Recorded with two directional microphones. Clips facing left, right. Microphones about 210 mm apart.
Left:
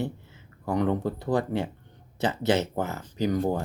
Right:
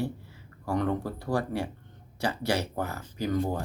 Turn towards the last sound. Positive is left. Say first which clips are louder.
# left 3 dB
turn(degrees=20)  # may be behind; listen again after turning